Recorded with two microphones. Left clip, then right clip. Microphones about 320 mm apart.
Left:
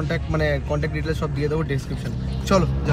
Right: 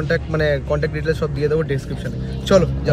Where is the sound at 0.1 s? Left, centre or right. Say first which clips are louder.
Right 5 dB; right.